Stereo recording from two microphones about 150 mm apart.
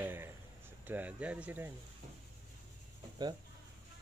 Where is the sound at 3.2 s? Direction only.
25° right (ahead or behind).